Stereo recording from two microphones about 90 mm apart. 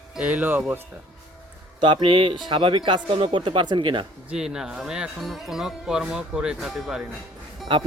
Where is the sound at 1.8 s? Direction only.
65° right (ahead or behind).